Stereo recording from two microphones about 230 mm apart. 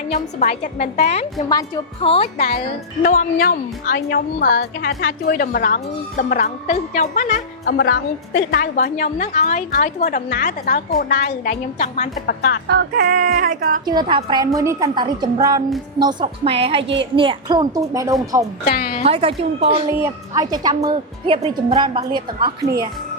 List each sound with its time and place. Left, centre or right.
0.1 s a woman's voice: left
1.4 s a woman's voice: centre
3.0 s a woman's voice: left
12.2 s a woman's voice: left
12.6 s speech: right
13.8 s a woman's voice: centre
16.8 s a woman's voice: right
17.2 s a woman's voice: right
18.6 s a woman's voice: left
19.0 s speech: right
19.9 s speech: centre
22.6 s speech: centre